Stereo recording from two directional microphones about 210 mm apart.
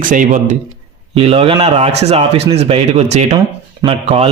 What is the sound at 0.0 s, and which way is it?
Speech, 40° right (ahead or behind).